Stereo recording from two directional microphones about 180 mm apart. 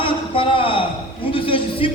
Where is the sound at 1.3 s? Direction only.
30° left (ahead or behind).